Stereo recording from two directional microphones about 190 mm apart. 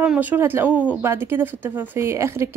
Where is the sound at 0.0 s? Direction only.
10° right (ahead or behind).